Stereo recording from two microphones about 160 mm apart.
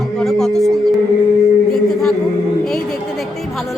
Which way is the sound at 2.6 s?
5° left (ahead or behind).